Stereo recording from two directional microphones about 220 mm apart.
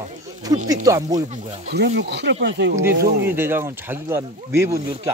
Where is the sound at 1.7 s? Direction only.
50° right (ahead or behind).